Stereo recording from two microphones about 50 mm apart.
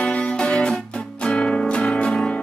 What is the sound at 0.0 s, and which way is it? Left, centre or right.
Music, left.